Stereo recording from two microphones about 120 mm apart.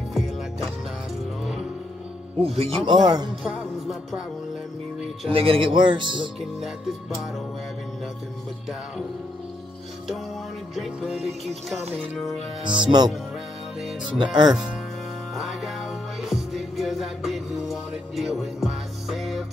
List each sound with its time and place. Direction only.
0.1 s music: centre (ahead or behind)
2.4 s speech: 55° right (ahead or behind)
2.9 s speech: 35° right (ahead or behind)
3.4 s music: centre (ahead or behind)
5.3 s speech: 50° right (ahead or behind)
6.6 s music: centre (ahead or behind)
10.8 s music: 5° right (ahead or behind)
12.6 s speech: 40° right (ahead or behind)
14.5 s music: 5° right (ahead or behind)